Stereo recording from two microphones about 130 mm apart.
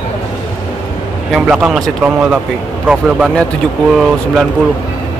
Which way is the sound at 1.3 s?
5° right (ahead or behind).